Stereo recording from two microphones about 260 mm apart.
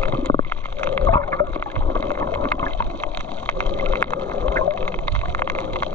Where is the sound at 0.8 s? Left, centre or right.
Centre.